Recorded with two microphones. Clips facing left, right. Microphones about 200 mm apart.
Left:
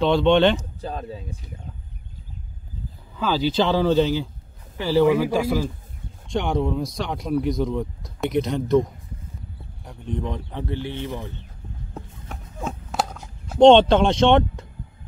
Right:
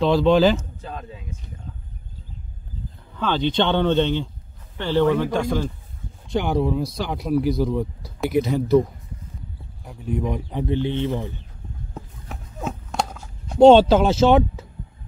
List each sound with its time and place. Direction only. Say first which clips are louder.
0.0 s speech: right 1 dB; centre (ahead or behind)
0.6 s speech: left 3 dB; 35° left (ahead or behind)
3.2 s speech: even; 5° left (ahead or behind)
9.8 s speech: right 3 dB; 5° right (ahead or behind)
11.9 s a sound: even; centre (ahead or behind)